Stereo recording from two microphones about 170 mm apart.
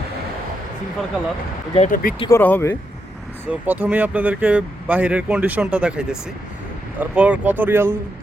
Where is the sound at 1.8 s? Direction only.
55° left (ahead or behind).